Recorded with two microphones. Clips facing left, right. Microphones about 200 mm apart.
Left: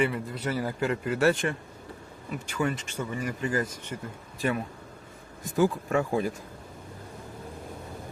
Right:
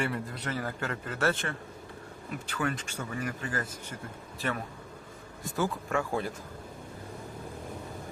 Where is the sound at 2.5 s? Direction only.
5° left (ahead or behind).